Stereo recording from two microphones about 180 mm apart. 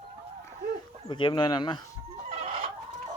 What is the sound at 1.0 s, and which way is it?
Speech, 25° left (ahead or behind).